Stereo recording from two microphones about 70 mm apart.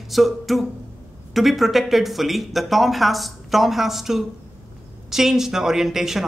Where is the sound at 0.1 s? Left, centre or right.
Centre.